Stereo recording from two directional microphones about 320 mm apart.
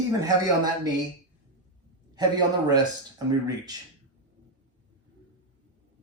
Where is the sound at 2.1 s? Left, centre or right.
Centre.